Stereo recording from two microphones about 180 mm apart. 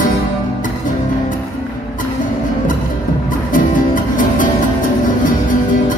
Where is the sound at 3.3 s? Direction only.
45° left (ahead or behind).